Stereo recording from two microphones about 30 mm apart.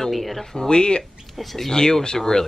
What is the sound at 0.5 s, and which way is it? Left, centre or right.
Speech, left.